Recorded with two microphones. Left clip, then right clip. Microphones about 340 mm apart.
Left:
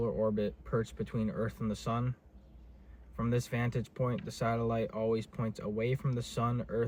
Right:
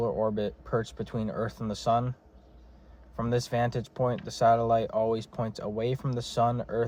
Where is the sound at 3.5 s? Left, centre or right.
Right.